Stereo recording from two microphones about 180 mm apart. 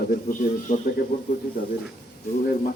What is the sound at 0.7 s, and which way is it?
Speech, 45° left (ahead or behind).